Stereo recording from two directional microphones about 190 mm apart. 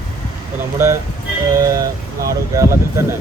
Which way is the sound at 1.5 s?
20° right (ahead or behind).